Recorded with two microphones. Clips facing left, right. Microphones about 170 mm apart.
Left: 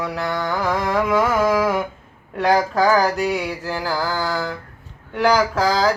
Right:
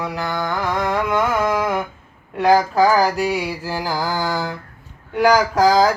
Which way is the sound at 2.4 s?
Centre (ahead or behind).